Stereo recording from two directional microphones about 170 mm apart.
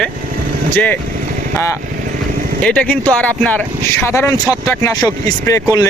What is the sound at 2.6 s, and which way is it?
Speech, 5° left (ahead or behind).